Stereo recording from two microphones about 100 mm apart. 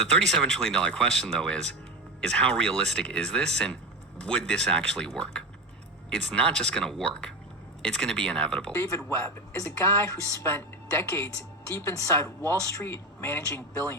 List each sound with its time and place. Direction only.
0.0 s speech: 10° left (ahead or behind)
8.7 s speech: 25° left (ahead or behind)
12.4 s speech: 25° left (ahead or behind)